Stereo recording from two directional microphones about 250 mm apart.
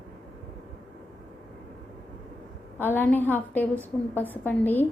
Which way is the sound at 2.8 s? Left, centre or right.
Centre.